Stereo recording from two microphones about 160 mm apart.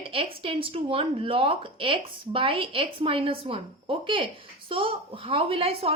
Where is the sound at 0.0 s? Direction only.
35° right (ahead or behind).